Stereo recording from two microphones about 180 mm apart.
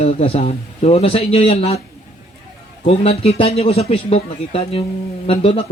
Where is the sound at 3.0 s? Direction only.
35° left (ahead or behind).